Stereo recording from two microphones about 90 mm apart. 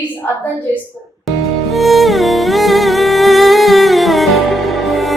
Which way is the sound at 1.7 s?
Centre (ahead or behind).